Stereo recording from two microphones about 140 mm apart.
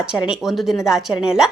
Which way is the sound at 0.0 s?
5° right (ahead or behind).